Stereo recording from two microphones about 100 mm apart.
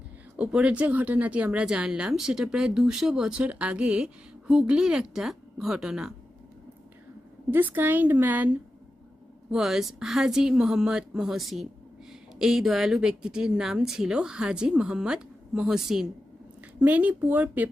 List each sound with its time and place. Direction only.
0.3 s speech: 10° right (ahead or behind)
7.5 s speech: 20° right (ahead or behind)
9.5 s a woman's voice: 5° right (ahead or behind)
16.8 s speech: 15° right (ahead or behind)